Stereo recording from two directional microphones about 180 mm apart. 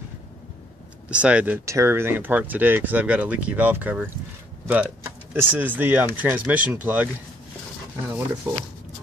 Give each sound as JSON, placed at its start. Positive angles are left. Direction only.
{"t": 1.1, "sound": "speech", "side_deg": -5}
{"t": 8.5, "sound": "speech", "side_deg": -15}